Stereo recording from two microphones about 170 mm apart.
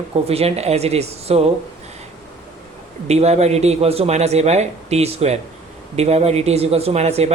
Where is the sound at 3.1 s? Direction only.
40° right (ahead or behind).